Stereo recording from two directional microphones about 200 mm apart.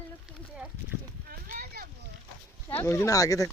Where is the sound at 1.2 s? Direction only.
45° right (ahead or behind).